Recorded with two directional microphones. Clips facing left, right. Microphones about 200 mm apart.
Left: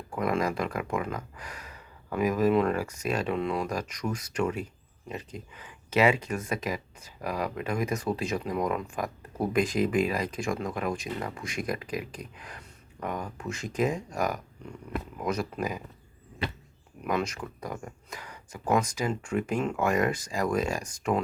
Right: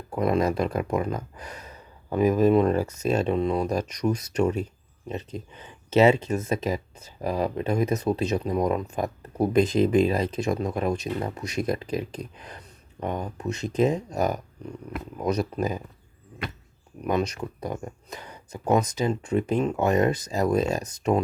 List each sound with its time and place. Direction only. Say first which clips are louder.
0.1 s speech: right 5 dB; 25° right (ahead or behind)
17.0 s speech: right 4 dB; 20° right (ahead or behind)